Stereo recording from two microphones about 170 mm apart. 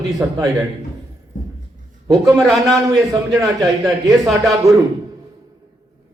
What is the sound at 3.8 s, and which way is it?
Speech, centre (ahead or behind).